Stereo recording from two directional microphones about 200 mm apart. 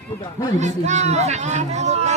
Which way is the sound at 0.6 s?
35° right (ahead or behind).